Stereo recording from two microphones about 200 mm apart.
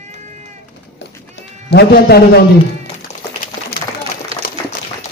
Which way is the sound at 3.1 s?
35° left (ahead or behind).